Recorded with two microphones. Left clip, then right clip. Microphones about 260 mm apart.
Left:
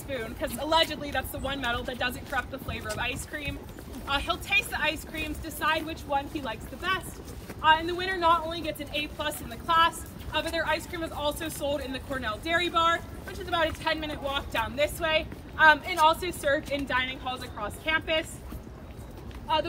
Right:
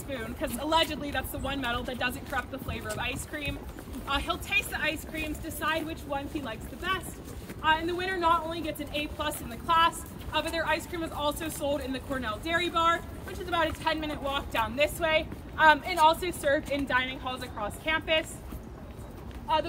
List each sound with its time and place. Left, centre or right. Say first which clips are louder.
0.1 s speech: left 2 dB; centre
4.6 s speech: left 2 dB; centre
5.1 s speech: even; centre
7.6 s speech: left 3 dB; centre; by 18.2 s right